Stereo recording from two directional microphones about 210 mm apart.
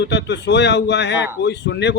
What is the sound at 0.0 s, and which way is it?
A man's voice, 55° left (ahead or behind).